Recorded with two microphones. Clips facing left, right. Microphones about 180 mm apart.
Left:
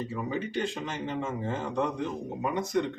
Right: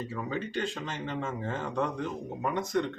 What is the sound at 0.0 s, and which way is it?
Speech, 15° left (ahead or behind).